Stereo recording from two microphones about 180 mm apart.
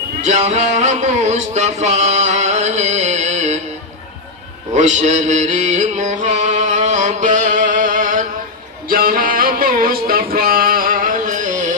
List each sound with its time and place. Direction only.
0.2 s a sound: 40° right (ahead or behind)
4.7 s mantra: 40° right (ahead or behind)
8.9 s music: 55° right (ahead or behind)